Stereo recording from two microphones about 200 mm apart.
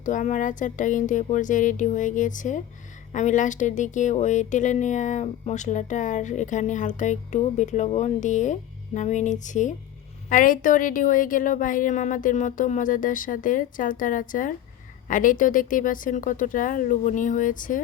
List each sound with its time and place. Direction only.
0.0 s speech: 40° left (ahead or behind)